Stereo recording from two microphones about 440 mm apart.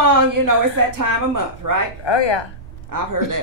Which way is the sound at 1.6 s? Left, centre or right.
Right.